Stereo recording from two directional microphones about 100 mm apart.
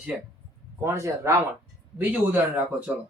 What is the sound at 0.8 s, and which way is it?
Speech, 25° right (ahead or behind).